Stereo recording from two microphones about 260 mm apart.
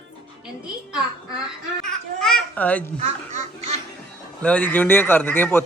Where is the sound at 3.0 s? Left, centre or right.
Right.